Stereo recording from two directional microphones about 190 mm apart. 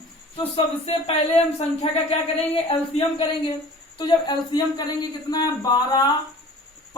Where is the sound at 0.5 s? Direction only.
30° left (ahead or behind).